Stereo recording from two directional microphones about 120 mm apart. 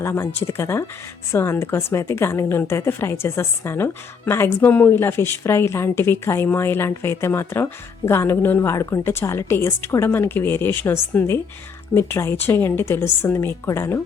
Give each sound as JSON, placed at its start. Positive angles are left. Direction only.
{"t": 0.0, "sound": "a woman's voice", "side_deg": 20}